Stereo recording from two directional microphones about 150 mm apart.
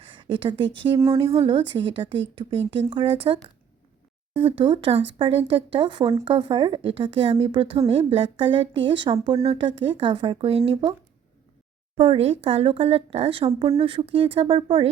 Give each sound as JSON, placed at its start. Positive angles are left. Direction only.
{"t": 0.1, "sound": "a woman's voice", "side_deg": -35}
{"t": 11.9, "sound": "a woman's voice", "side_deg": -40}